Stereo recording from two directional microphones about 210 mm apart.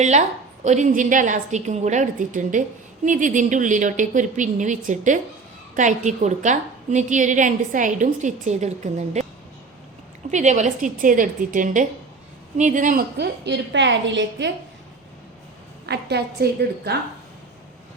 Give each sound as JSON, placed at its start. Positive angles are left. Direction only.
{"t": 0.0, "sound": "a woman's voice", "side_deg": -35}
{"t": 10.3, "sound": "a woman's voice", "side_deg": -35}
{"t": 13.1, "sound": "a woman's voice", "side_deg": -55}
{"t": 15.9, "sound": "a woman's voice", "side_deg": -50}